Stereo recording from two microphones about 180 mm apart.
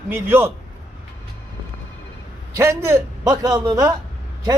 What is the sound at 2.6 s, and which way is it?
A man's voice, 15° right (ahead or behind).